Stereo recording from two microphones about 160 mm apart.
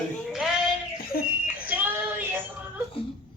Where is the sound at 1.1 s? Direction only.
70° left (ahead or behind).